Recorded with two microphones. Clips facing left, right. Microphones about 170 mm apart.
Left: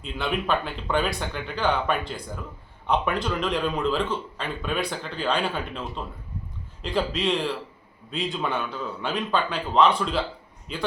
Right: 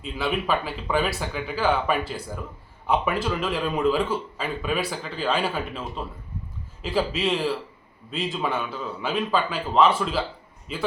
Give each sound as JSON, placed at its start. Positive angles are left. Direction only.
{"t": 0.0, "sound": "a man's voice", "side_deg": -5}